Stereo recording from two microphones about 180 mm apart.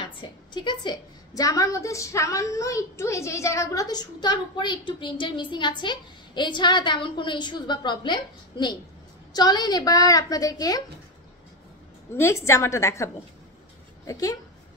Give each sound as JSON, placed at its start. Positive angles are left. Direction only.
{"t": 0.0, "sound": "a woman's voice", "side_deg": 25}
{"t": 12.1, "sound": "a woman's voice", "side_deg": 15}